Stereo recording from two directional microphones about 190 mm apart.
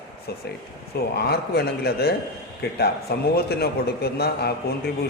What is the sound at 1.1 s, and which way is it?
A man's voice, 55° left (ahead or behind).